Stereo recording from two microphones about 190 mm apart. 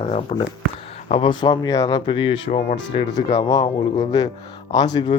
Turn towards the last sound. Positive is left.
turn(degrees=20)  # may be behind; listen again after turning